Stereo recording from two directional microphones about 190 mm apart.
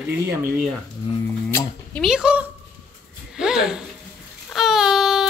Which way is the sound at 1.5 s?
5° left (ahead or behind).